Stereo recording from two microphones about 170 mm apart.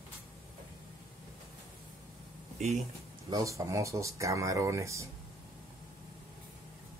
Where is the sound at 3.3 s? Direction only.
20° right (ahead or behind).